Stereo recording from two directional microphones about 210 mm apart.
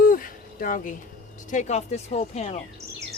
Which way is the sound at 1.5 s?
35° left (ahead or behind).